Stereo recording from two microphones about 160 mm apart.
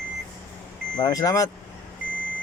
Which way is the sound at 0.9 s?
25° left (ahead or behind).